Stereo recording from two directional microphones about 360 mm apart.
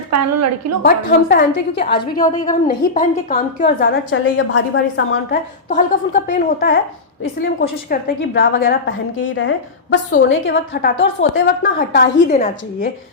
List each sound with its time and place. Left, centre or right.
0.1 s a woman's voice: right
0.8 s a woman's voice: left